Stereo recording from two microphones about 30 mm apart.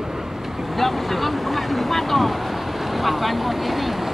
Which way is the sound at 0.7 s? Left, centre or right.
Centre.